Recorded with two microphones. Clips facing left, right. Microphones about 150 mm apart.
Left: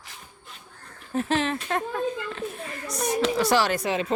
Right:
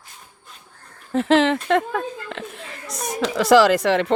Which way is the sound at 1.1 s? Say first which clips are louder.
Right 8 dB; 90° right.